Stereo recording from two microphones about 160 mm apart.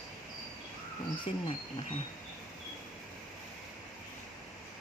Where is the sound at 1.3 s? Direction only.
35° left (ahead or behind).